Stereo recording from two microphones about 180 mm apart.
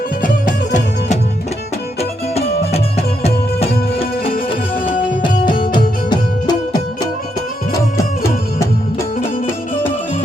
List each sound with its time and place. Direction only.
0.2 s music: 45° left (ahead or behind)
2.0 s music: 35° left (ahead or behind)
4.9 s music: 25° left (ahead or behind)